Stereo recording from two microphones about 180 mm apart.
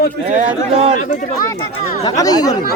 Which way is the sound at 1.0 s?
45° left (ahead or behind).